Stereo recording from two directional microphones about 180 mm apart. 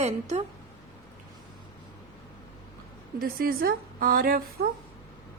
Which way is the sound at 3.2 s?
55° right (ahead or behind).